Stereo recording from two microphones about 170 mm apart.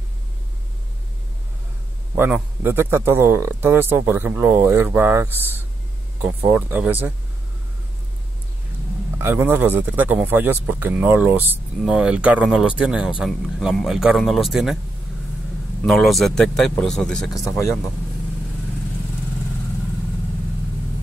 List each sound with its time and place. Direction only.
2.1 s speech: 10° right (ahead or behind)
9.2 s speech: 15° right (ahead or behind)
15.8 s speech: centre (ahead or behind)
17.5 s speech: 20° left (ahead or behind)